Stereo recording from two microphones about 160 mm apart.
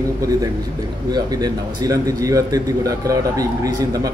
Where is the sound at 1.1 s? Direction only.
25° right (ahead or behind).